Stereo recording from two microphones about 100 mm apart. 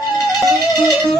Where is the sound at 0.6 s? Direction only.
45° left (ahead or behind).